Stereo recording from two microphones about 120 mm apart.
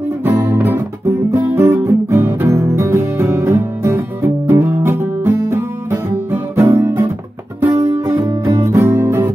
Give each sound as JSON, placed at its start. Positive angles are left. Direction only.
{"t": 0.2, "sound": "guitar", "side_deg": -20}
{"t": 7.7, "sound": "music", "side_deg": -35}
{"t": 8.0, "sound": "music", "side_deg": -25}